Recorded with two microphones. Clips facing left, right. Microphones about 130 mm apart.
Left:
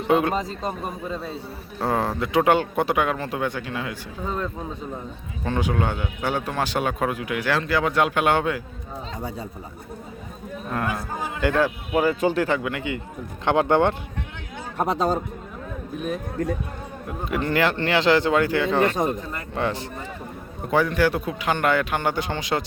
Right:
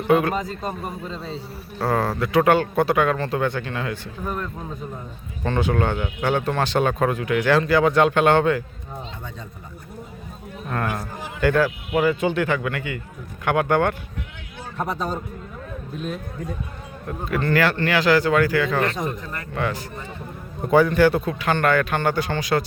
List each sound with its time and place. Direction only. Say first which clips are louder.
0.1 s a man's voice: right 1 dB; 25° left (ahead or behind)
5.4 s a man's voice: right 2 dB; 10° left (ahead or behind)
11.4 s speech: right 2 dB; 25° left (ahead or behind)
11.9 s speech: even; 35° left (ahead or behind)
12.6 s speech: even; 20° left (ahead or behind)
16.0 s a man's voice: left 4 dB; 15° left (ahead or behind)
20.7 s a man's voice: right 4 dB; centre (ahead or behind)
21.3 s a man's voice: right 2 dB; 15° left (ahead or behind)